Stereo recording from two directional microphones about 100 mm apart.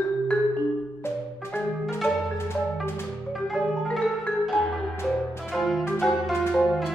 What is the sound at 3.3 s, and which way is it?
Marimba, centre (ahead or behind).